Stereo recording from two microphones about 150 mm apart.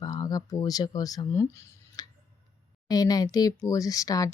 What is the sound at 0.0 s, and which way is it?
Speech, 25° left (ahead or behind).